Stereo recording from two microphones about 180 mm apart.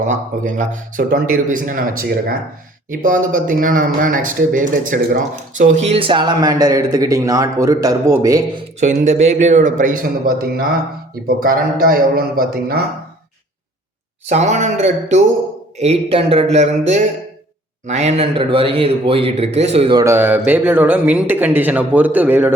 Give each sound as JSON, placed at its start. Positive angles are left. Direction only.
{"t": 0.0, "sound": "a man's voice", "side_deg": -45}
{"t": 8.8, "sound": "a man's voice", "side_deg": -40}
{"t": 14.3, "sound": "a man's voice", "side_deg": -40}
{"t": 20.1, "sound": "speech", "side_deg": -10}